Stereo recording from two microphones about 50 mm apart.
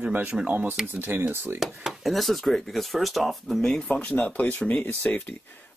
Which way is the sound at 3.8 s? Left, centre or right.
Left.